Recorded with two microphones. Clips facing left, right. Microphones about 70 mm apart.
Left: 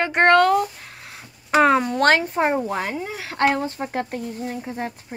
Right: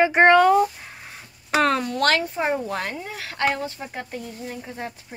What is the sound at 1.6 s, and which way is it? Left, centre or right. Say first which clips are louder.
Speech: left 4 dB; centre.